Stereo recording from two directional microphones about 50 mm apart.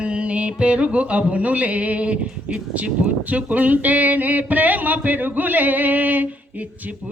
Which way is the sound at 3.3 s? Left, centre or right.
Right.